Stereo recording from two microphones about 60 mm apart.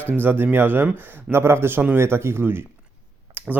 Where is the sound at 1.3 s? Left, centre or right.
Right.